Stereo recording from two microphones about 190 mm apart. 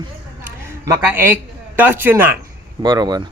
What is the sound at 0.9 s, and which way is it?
A man's voice, 10° right (ahead or behind).